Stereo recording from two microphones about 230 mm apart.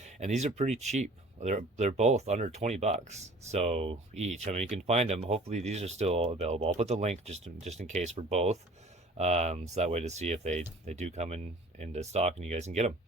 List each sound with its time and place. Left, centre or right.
0.0 s speech: right